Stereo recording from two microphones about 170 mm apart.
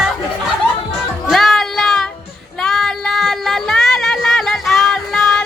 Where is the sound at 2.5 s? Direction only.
Centre (ahead or behind).